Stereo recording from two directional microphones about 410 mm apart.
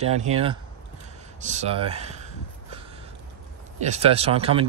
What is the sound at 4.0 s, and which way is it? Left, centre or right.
Speech, centre.